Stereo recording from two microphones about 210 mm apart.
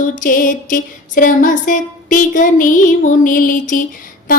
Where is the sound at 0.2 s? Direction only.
40° left (ahead or behind).